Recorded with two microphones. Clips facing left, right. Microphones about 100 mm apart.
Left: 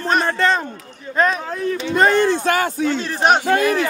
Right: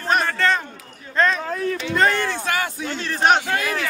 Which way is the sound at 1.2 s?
10° left (ahead or behind).